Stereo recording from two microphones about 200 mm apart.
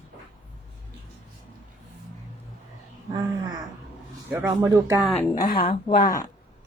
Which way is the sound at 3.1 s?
20° right (ahead or behind).